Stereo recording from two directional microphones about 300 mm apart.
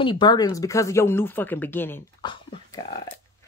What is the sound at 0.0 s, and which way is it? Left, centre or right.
Speech, centre.